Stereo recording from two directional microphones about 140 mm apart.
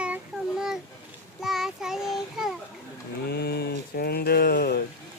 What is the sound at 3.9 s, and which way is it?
Speech, 90° left.